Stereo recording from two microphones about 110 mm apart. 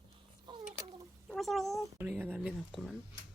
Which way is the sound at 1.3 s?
Centre (ahead or behind).